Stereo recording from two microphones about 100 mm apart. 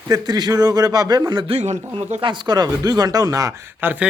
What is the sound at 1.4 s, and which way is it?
Speech, 90° right.